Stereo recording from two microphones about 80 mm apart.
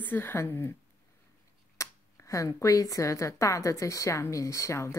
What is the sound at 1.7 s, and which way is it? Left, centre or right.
Speech, left.